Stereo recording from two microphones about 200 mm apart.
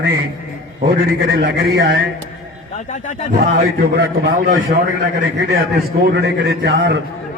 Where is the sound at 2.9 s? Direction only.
40° left (ahead or behind).